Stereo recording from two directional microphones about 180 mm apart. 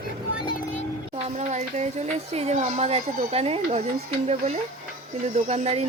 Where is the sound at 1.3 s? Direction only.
40° right (ahead or behind).